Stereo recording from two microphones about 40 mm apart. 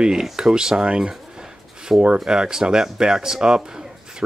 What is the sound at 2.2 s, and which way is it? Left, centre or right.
Speech, centre.